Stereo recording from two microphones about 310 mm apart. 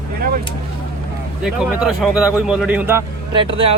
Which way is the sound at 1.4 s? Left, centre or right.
Centre.